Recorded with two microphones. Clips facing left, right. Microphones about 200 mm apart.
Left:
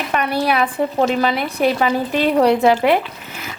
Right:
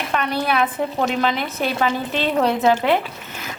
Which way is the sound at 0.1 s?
10° left (ahead or behind).